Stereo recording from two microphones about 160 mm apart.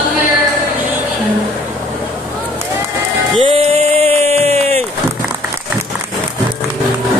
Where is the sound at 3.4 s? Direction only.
35° right (ahead or behind).